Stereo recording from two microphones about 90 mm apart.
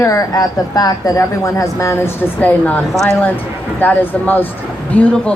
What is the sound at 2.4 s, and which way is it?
Speech, 15° left (ahead or behind).